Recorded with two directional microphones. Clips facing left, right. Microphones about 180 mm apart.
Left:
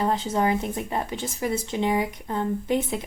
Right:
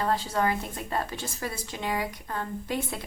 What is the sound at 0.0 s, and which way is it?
Speech, 20° left (ahead or behind).